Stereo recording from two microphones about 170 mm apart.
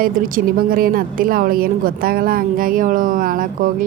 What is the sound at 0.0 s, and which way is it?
Speech, 55° right (ahead or behind).